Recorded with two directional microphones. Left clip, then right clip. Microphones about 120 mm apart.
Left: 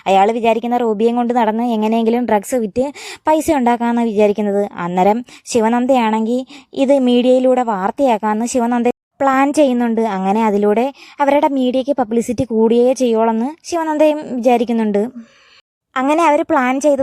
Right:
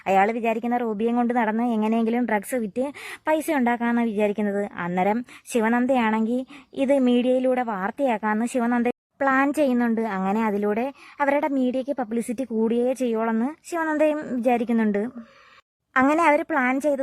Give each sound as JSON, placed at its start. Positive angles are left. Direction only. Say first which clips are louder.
{"t": 0.0, "sound": "a woman's voice", "louder": "left 8 dB", "side_deg": 45}
{"t": 4.4, "sound": "a woman's voice", "louder": "left 9 dB", "side_deg": 40}
{"t": 8.9, "sound": "a woman's voice", "louder": "left 7 dB", "side_deg": 50}
{"t": 13.3, "sound": "a woman's voice", "louder": "left 7 dB", "side_deg": 35}
{"t": 16.0, "sound": "a woman's voice", "louder": "left 6 dB", "side_deg": 35}